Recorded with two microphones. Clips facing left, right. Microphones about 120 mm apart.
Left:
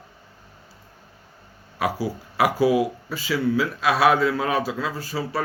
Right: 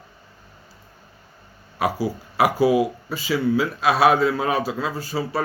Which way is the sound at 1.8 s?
25° right (ahead or behind).